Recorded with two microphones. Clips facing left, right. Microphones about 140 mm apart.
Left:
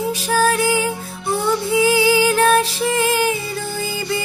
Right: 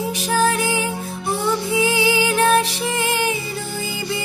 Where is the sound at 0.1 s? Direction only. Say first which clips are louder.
Left 1 dB; 20° right (ahead or behind).